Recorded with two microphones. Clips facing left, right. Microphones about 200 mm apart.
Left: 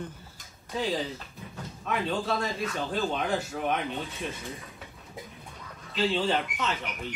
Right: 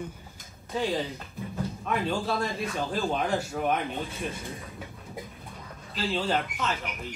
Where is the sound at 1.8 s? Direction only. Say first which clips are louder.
Even; centre (ahead or behind).